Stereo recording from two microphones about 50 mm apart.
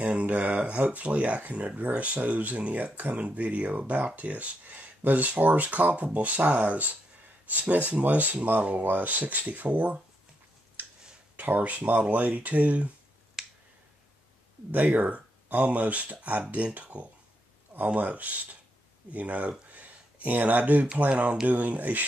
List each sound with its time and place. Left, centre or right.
0.0 s speech: right
10.8 s a sound: right
11.3 s speech: right
13.4 s finger snapping: centre
14.7 s speech: right
19.7 s a sound: right
21.1 s speech: right